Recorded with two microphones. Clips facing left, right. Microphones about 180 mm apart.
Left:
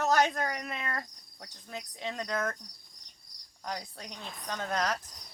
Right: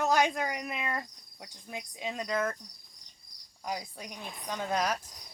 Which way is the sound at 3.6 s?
10° right (ahead or behind).